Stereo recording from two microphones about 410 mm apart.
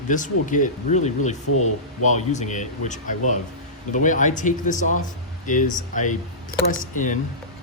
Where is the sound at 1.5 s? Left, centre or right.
Left.